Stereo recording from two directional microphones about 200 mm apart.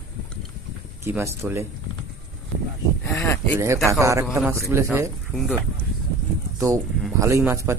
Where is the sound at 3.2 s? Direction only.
10° left (ahead or behind).